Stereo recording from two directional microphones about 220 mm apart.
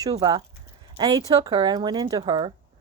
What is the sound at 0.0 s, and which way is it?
Speech, 20° right (ahead or behind).